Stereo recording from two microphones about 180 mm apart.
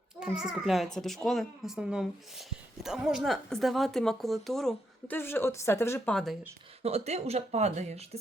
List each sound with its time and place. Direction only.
0.2 s speech: 5° right (ahead or behind); by 6.1 s 15° left (ahead or behind)
6.8 s speech: 35° right (ahead or behind)